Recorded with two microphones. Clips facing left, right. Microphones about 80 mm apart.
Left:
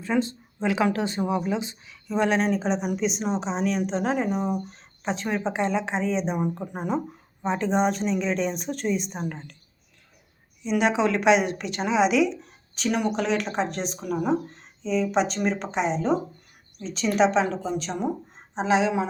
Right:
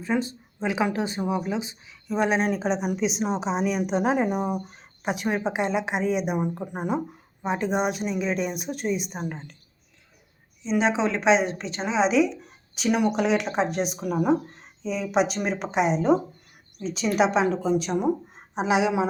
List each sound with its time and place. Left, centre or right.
0.0 s a woman's voice: centre
2.5 s a woman's voice: centre
10.6 s a woman's voice: right
12.7 s a woman's voice: centre